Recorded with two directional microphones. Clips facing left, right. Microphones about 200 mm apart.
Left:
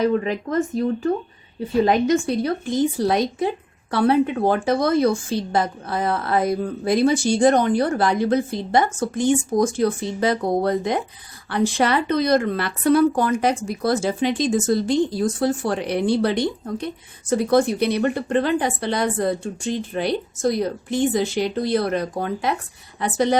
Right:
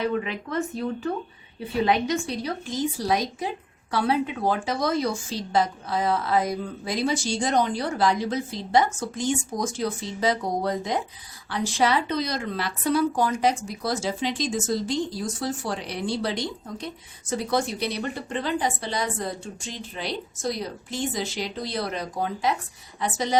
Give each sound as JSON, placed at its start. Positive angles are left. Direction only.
{"t": 0.0, "sound": "a woman's voice", "side_deg": 40}